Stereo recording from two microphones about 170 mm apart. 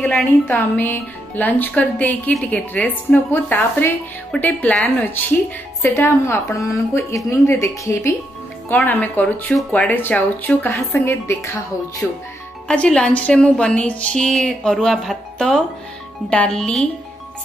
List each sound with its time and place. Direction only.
0.0 s a woman's voice: 10° left (ahead or behind)